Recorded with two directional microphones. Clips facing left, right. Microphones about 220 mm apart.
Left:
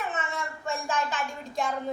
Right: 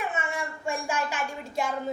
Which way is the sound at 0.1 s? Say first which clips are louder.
Right 1 dB; 10° right (ahead or behind).